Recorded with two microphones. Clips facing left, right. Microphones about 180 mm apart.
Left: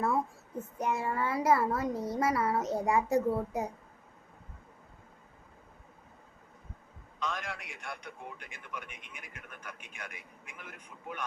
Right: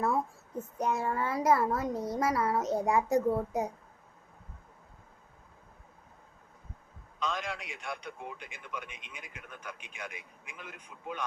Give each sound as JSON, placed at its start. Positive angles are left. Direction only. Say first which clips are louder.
{"t": 0.9, "sound": "a child's voice", "louder": "even", "side_deg": 5}
{"t": 7.3, "sound": "a man's voice", "louder": "right 3 dB", "side_deg": -20}